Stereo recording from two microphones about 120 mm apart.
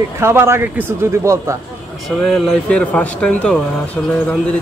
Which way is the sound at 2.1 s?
5° left (ahead or behind).